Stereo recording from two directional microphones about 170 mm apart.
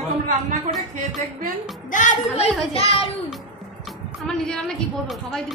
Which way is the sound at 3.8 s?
Centre (ahead or behind).